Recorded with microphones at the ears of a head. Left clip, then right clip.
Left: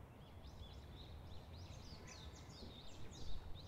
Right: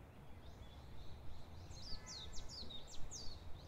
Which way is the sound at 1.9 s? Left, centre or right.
Right.